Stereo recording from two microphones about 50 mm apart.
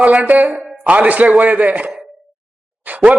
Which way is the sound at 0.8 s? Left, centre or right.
Right.